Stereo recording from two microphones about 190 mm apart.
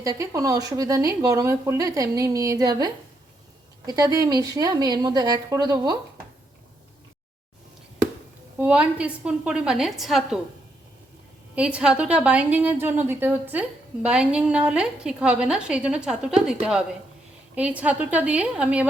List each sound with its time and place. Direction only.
0.0 s a woman's voice: 20° right (ahead or behind)
8.5 s a woman's voice: 5° right (ahead or behind)
11.5 s a woman's voice: 5° right (ahead or behind)